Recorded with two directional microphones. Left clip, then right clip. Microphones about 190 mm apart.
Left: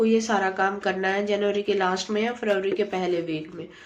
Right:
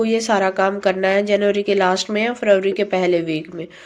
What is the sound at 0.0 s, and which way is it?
A woman's voice, 35° right (ahead or behind).